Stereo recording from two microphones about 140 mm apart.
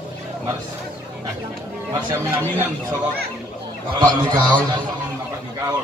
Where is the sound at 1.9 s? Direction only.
35° right (ahead or behind).